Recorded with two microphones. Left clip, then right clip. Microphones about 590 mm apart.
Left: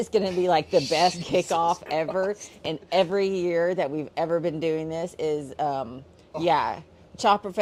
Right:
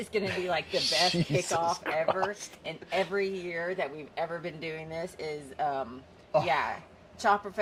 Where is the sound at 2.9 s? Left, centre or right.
Left.